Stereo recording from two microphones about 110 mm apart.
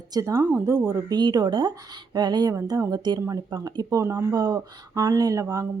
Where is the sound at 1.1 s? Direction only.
40° right (ahead or behind).